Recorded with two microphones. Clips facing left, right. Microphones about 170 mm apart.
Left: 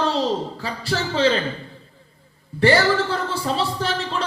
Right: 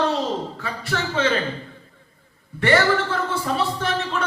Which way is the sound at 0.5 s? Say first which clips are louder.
Left 2 dB; 30° left (ahead or behind).